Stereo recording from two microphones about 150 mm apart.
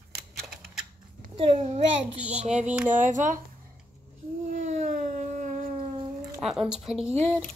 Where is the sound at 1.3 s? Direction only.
40° right (ahead or behind); by 3.4 s 60° right (ahead or behind).